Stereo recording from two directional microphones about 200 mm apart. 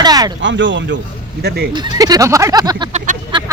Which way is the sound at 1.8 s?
20° right (ahead or behind).